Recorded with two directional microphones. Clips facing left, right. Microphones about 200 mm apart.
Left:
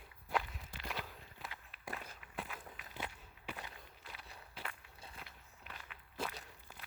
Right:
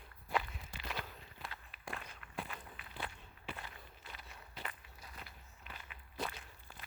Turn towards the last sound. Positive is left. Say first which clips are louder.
# even
turn(degrees=0)  # may be behind; listen again after turning